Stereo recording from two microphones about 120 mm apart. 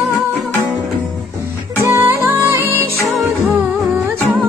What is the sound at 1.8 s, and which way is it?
Music, 15° right (ahead or behind).